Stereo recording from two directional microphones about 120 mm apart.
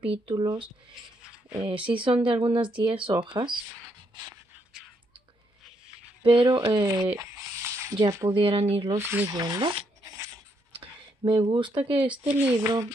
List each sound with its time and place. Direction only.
0.0 s speech: 45° right (ahead or behind)
1.7 s speech: 45° right (ahead or behind)
6.2 s speech: 45° right (ahead or behind); by 8.3 s 30° right (ahead or behind)
8.3 s speech: 50° right (ahead or behind)
8.9 s speech: 15° right (ahead or behind)
9.3 s speech: 35° right (ahead or behind)
10.8 s a sound: 45° right (ahead or behind)
12.2 s speech: 15° right (ahead or behind)